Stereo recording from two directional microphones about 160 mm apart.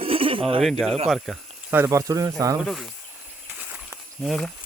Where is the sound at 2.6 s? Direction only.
Centre (ahead or behind).